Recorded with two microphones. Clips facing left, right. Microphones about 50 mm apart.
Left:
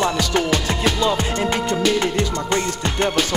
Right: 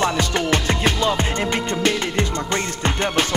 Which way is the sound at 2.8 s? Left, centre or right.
Right.